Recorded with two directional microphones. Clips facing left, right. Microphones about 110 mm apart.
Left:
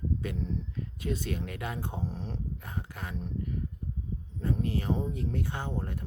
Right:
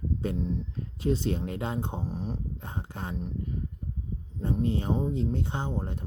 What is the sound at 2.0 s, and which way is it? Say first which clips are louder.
Speech: right 3 dB; 15° right (ahead or behind).